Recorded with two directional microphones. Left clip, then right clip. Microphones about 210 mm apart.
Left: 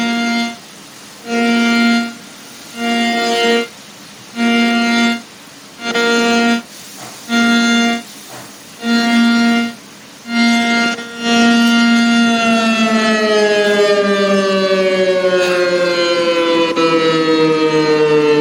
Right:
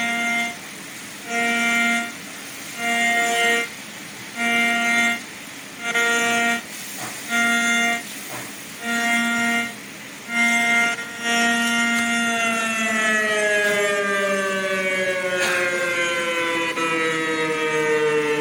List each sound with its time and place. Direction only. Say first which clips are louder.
0.0 s music: left 4 dB; 50° left (ahead or behind)